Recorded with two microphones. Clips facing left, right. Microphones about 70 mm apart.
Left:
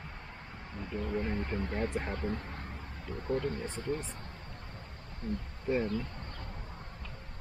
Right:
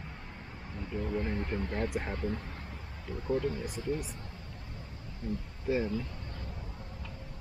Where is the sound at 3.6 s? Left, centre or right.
Centre.